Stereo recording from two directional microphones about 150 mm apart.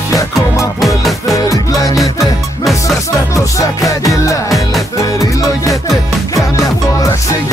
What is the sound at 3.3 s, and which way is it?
Music, 20° left (ahead or behind).